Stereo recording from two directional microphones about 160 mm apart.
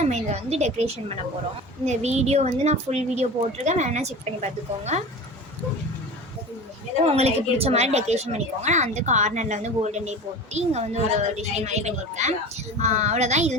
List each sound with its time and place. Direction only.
0.0 s a woman's voice: 45° right (ahead or behind)
7.0 s a woman's voice: 40° right (ahead or behind)